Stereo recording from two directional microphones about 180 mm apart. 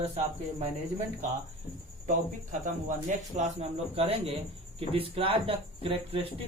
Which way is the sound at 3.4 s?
35° right (ahead or behind).